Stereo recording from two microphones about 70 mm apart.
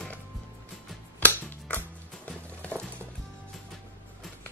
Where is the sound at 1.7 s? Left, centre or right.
Centre.